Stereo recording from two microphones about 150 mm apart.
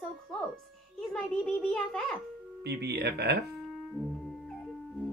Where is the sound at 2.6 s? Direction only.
90° right.